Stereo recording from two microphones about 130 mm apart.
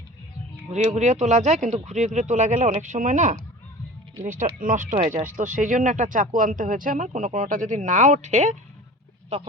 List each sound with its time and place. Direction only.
0.7 s speech: 60° right (ahead or behind)